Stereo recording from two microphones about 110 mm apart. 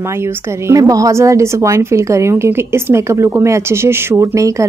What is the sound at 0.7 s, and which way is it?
A woman's voice, 30° right (ahead or behind).